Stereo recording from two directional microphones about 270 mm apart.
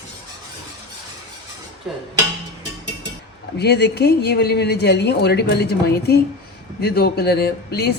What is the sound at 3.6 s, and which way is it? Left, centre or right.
A woman's voice, left.